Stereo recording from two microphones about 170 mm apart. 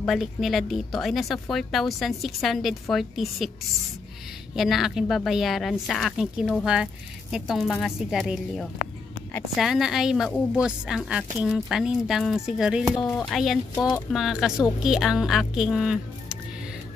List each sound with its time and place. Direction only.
0.0 s speech: centre (ahead or behind)
4.6 s speech: centre (ahead or behind)
13.7 s speech: 20° left (ahead or behind)
14.1 s speech: 5° right (ahead or behind)